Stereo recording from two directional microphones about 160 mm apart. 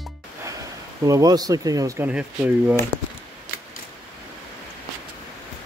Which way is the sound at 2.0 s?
5° right (ahead or behind).